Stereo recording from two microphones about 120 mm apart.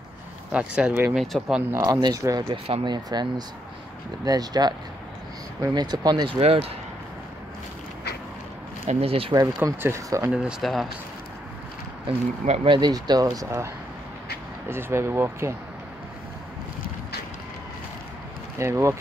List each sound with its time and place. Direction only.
0.5 s speech: 10° right (ahead or behind)
1.9 s speech: 35° right (ahead or behind)
2.5 s speech: 50° right (ahead or behind)
8.8 s speech: 55° right (ahead or behind)
9.7 s speech: 20° right (ahead or behind)
10.3 s speech: 5° right (ahead or behind)
12.1 s speech: 60° right (ahead or behind)
12.6 s speech: 40° right (ahead or behind)
14.7 s speech: 20° right (ahead or behind)
18.6 s speech: 25° right (ahead or behind)